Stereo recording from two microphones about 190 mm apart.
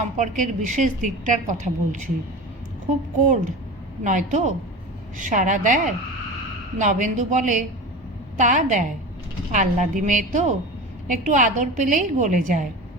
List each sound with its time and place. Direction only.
0.2 s a woman's voice: 40° right (ahead or behind)
4.0 s a woman's voice: 40° right (ahead or behind)